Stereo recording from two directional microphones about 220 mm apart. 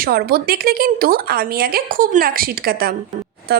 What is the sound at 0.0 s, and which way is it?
A woman's voice, 45° right (ahead or behind).